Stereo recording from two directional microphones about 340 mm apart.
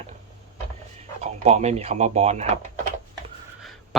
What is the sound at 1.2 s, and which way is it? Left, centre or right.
Speech, centre.